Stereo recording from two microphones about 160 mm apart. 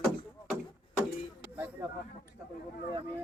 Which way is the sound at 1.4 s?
10° right (ahead or behind).